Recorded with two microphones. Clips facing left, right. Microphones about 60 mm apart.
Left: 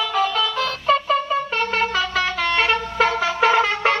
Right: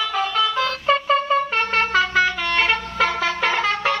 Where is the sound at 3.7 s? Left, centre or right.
Left.